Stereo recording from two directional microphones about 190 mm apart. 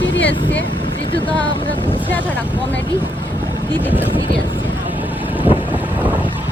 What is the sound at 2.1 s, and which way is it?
Speech, 10° left (ahead or behind).